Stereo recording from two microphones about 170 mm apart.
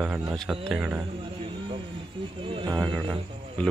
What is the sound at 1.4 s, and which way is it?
Vehicle, 30° right (ahead or behind).